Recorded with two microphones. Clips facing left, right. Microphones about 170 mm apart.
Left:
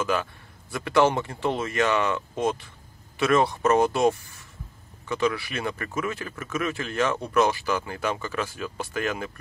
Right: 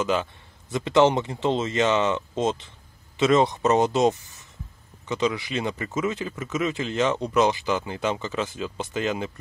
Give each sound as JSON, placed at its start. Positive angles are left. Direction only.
{"t": 0.0, "sound": "speech", "side_deg": -20}